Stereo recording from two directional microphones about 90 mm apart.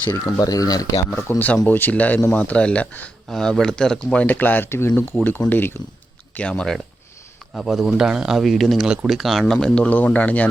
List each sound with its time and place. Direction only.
0.3 s speech: 40° left (ahead or behind)
1.3 s speech: 25° left (ahead or behind)
3.2 s speech: 5° left (ahead or behind); by 5.7 s 25° left (ahead or behind)
6.3 s speech: 10° left (ahead or behind)